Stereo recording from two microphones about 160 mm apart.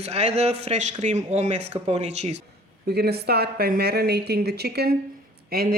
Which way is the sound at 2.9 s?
85° right.